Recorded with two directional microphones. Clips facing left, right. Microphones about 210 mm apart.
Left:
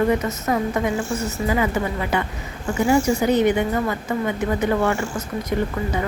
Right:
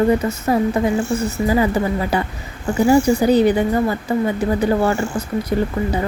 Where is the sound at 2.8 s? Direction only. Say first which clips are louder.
Right 4 dB; 35° right (ahead or behind).